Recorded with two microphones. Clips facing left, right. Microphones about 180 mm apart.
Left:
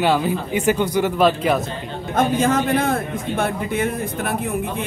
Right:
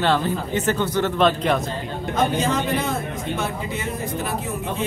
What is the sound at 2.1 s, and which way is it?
A man's voice, 50° left (ahead or behind).